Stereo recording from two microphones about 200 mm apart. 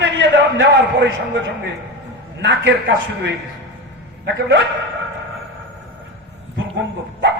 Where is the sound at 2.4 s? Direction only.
65° right (ahead or behind).